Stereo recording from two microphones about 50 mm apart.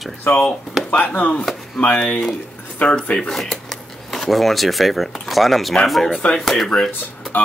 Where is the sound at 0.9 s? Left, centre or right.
Left; by 6.7 s centre.